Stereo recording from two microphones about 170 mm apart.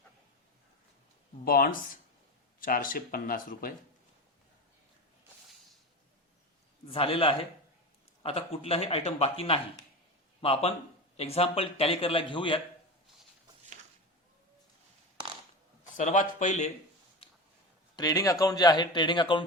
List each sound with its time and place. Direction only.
1.5 s speech: 55° left (ahead or behind)
6.9 s a man's voice: 30° left (ahead or behind)
15.8 s speech: 45° left (ahead or behind)
17.9 s a man's voice: 20° left (ahead or behind)